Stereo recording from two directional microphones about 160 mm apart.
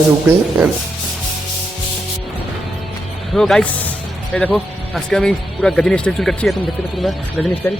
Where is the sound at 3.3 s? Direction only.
Centre (ahead or behind).